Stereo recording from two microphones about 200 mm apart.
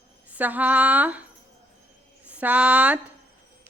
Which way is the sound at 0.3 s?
10° right (ahead or behind).